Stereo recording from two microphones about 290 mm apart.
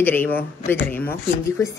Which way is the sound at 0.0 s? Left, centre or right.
Centre.